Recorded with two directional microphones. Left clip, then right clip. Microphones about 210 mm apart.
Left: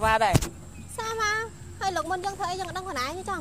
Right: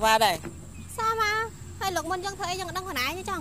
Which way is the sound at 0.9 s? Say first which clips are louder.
Right 2 dB; 25° right (ahead or behind).